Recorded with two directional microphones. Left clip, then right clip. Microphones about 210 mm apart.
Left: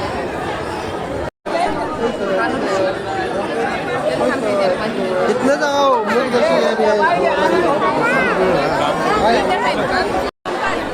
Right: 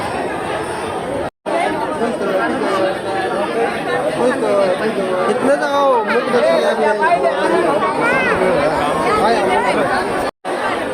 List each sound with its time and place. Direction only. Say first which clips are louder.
5.5 s chatter: right 1 dB; 30° left (ahead or behind)